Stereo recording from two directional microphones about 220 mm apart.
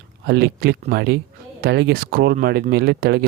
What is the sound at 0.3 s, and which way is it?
Speech, 45° right (ahead or behind).